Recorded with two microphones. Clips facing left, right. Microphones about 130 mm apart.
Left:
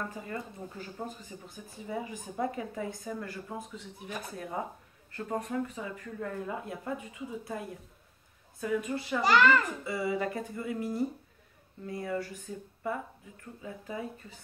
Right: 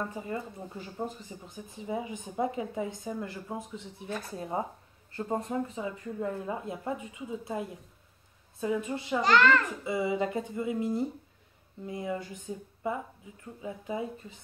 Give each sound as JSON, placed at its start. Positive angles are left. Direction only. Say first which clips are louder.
{"t": 0.0, "sound": "speech", "louder": "right 3 dB", "side_deg": -20}
{"t": 9.2, "sound": "a child's voice", "louder": "even", "side_deg": 10}
{"t": 9.8, "sound": "speech", "louder": "right 2 dB", "side_deg": -20}